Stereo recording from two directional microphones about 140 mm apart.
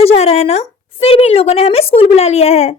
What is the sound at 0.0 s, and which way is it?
A woman's voice, 50° left (ahead or behind).